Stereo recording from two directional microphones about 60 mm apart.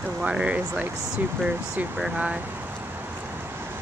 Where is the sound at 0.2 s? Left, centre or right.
Centre.